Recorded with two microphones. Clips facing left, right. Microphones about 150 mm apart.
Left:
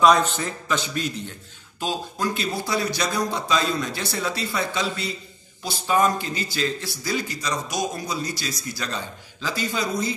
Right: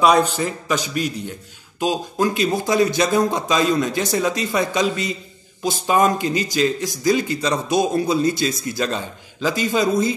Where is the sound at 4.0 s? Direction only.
45° right (ahead or behind).